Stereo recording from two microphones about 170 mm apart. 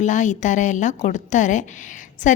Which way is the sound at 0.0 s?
45° left (ahead or behind).